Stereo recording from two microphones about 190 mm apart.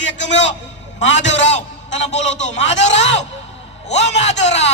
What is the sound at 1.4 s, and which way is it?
Speech, 35° left (ahead or behind).